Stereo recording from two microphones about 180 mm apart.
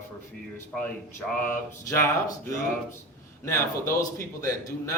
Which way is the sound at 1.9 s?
15° left (ahead or behind).